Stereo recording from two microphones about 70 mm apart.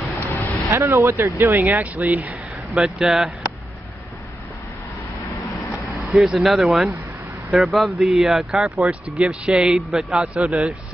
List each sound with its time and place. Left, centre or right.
0.3 s vehicle: left
0.7 s speech: right
2.7 s speech: centre
6.0 s speech: centre